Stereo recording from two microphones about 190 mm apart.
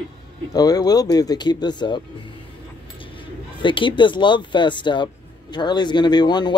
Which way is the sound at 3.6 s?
25° left (ahead or behind).